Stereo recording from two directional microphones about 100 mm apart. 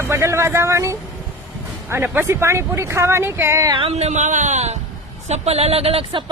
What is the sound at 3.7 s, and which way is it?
Speech, 75° right (ahead or behind).